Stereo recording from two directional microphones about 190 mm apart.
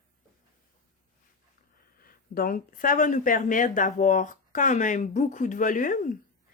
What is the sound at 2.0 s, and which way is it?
Speech, 50° left (ahead or behind).